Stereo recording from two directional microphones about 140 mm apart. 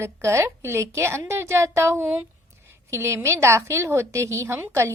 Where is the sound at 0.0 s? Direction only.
20° right (ahead or behind).